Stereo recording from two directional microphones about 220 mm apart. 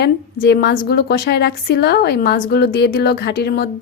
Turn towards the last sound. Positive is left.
turn(degrees=45)  # may be behind; listen again after turning